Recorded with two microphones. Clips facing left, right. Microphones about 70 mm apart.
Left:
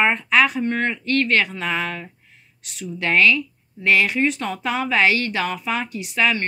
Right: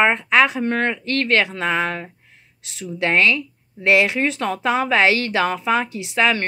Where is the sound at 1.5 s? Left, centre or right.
Right.